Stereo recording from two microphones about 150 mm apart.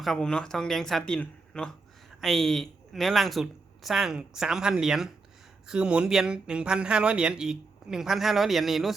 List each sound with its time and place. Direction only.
0.0 s speech: 5° left (ahead or behind)